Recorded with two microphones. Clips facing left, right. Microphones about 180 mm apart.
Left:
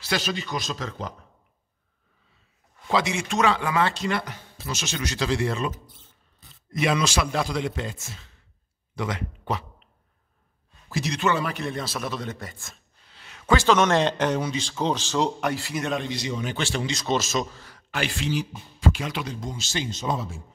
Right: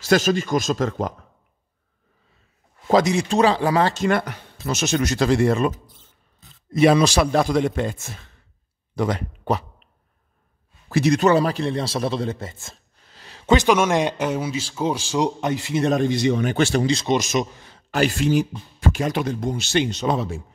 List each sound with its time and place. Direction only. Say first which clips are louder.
0.0 s speech: right 10 dB; 45° right (ahead or behind)
2.9 s speech: right 7 dB; 40° right (ahead or behind)
6.7 s speech: right 8 dB; 35° right (ahead or behind); by 8.3 s 55° right (ahead or behind)
8.9 s speech: right 7 dB; 40° right (ahead or behind)
10.9 s a man's voice: right 11 dB; 60° right (ahead or behind)
11.1 s a man's voice: right 5 dB; 35° right (ahead or behind)
13.1 s a sound: right 4 dB; 35° right (ahead or behind)
13.5 s speech: right 3 dB; 15° right (ahead or behind)
15.8 s speech: right 12 dB; 45° right (ahead or behind)
16.5 s a man's voice: right 9 dB; 40° right (ahead or behind)
17.0 s a man's voice: right 4 dB; 15° right (ahead or behind)
17.9 s speech: right 8 dB; 45° right (ahead or behind); by 20.4 s 65° right (ahead or behind)